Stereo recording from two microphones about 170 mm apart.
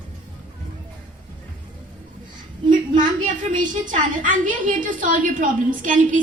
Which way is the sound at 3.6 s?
50° right (ahead or behind).